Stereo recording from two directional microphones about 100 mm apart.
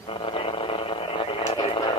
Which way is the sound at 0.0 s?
65° left (ahead or behind).